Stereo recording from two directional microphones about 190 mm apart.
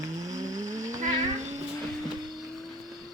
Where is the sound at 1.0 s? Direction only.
40° right (ahead or behind).